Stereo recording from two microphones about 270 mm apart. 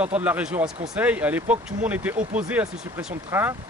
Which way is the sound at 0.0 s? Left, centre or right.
Centre.